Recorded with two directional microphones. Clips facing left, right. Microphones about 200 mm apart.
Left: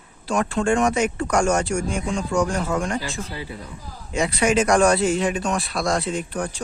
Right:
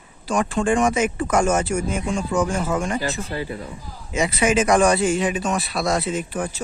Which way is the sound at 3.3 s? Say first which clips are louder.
Right 5 dB; 50° right (ahead or behind).